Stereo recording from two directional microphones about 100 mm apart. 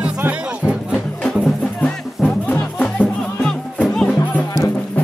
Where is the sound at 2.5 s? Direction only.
15° left (ahead or behind).